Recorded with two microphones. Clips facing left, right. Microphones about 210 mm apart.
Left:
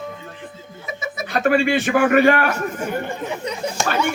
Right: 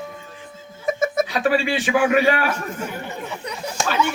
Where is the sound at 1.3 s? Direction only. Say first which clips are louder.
Left 3 dB; 50° left (ahead or behind).